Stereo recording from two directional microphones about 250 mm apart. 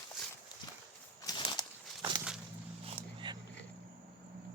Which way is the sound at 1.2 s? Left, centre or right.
Centre.